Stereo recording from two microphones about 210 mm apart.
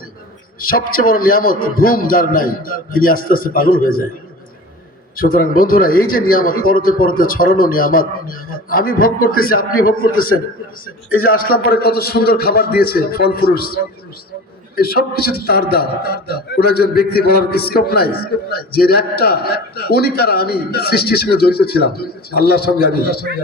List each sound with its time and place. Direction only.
0.6 s a man's voice: 45° left (ahead or behind)
5.1 s a man's voice: 45° left (ahead or behind)
14.8 s a man's voice: 45° left (ahead or behind)